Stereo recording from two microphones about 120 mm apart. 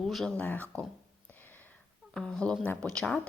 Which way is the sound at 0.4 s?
15° left (ahead or behind).